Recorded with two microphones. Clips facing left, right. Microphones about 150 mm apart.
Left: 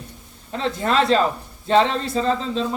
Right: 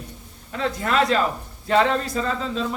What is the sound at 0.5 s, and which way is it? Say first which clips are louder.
A man's voice: left 2 dB; 30° left (ahead or behind).